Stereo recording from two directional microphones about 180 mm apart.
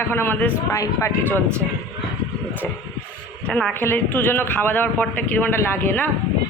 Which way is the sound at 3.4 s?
5° left (ahead or behind).